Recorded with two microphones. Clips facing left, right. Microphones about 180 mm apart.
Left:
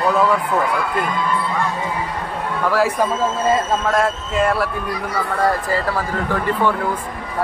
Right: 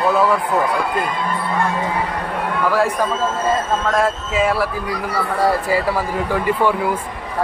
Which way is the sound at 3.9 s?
Centre (ahead or behind).